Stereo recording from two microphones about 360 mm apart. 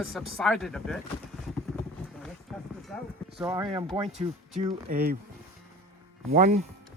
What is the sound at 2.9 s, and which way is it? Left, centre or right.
Clip-clop, centre.